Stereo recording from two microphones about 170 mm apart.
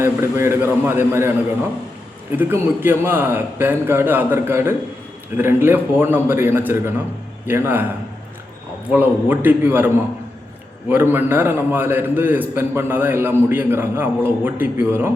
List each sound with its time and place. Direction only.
0.0 s a man's voice: 15° right (ahead or behind)
8.9 s a man's voice: 10° right (ahead or behind)